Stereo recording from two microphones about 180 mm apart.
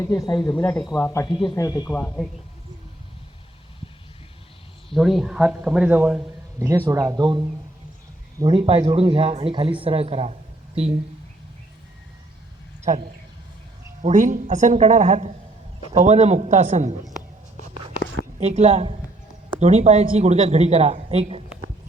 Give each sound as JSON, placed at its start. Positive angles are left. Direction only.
{"t": 0.0, "sound": "speech", "side_deg": 20}
{"t": 1.9, "sound": "speech", "side_deg": 5}
{"t": 4.9, "sound": "speech", "side_deg": 0}
{"t": 14.0, "sound": "speech", "side_deg": -45}
{"t": 18.3, "sound": "speech", "side_deg": -35}